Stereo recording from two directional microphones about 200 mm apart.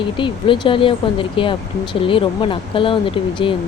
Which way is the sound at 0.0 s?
25° left (ahead or behind).